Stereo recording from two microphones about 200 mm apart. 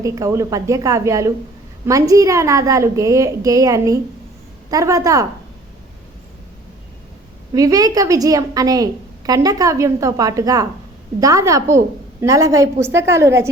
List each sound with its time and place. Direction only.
0.0 s a woman's voice: 15° right (ahead or behind)
7.5 s a woman's voice: 15° right (ahead or behind)